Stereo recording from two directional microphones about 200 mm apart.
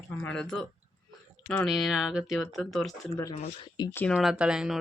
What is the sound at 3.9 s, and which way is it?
Speech, 10° left (ahead or behind).